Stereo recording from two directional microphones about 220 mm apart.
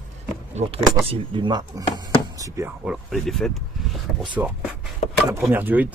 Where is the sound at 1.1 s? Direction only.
20° right (ahead or behind).